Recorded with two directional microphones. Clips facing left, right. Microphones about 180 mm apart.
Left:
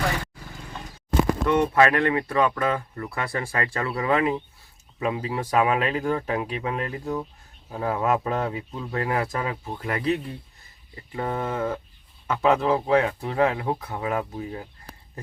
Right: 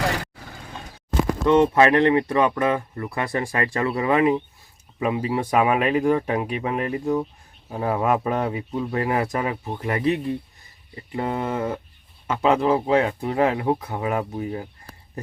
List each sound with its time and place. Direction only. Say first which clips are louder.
1.5 s speech: right 5 dB; 25° right (ahead or behind)